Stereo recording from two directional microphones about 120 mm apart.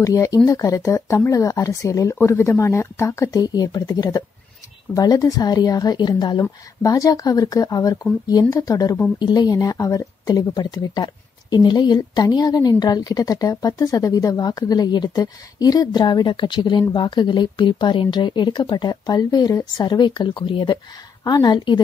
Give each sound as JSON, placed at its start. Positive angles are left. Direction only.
{"t": 0.0, "sound": "a woman's voice", "side_deg": 25}